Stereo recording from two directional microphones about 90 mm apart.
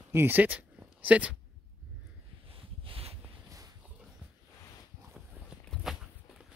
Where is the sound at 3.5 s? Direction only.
40° right (ahead or behind).